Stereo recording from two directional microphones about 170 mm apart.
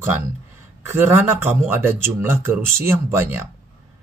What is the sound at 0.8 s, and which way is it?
Speech, 15° right (ahead or behind).